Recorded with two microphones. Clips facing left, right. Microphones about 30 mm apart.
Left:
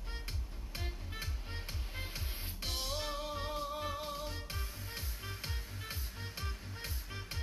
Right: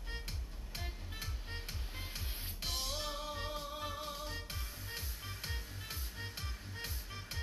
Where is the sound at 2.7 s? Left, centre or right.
Centre.